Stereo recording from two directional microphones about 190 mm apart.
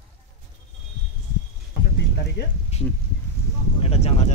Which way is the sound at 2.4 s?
65° left (ahead or behind).